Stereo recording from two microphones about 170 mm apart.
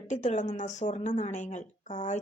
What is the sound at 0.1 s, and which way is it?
A woman's voice, 45° left (ahead or behind).